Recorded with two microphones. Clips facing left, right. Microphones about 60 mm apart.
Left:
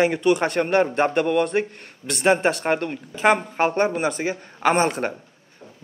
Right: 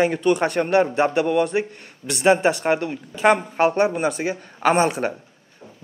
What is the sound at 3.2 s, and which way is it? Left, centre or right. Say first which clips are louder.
A man's voice: right 2 dB; centre.